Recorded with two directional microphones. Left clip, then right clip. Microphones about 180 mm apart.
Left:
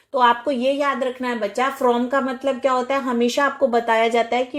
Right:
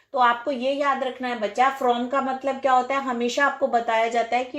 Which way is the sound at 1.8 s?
40° left (ahead or behind).